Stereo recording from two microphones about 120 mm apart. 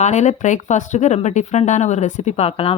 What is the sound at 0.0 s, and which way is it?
A woman's voice, 75° left (ahead or behind).